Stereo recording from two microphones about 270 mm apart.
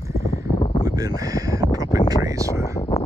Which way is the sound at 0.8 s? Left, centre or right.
Centre.